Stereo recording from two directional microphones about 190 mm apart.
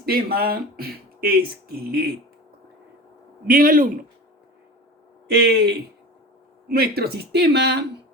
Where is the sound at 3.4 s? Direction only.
50° right (ahead or behind).